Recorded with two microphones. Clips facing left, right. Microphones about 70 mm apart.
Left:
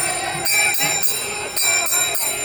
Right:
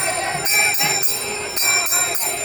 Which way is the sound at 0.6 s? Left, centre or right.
Right.